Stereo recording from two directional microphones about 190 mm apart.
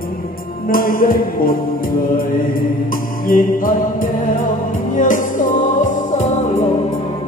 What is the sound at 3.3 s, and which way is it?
Mantra, 45° left (ahead or behind).